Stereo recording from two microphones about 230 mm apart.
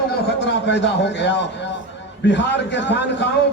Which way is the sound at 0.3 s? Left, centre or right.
Left.